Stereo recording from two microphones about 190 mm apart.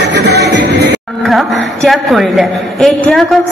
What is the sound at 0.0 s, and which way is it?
Music, 60° right (ahead or behind).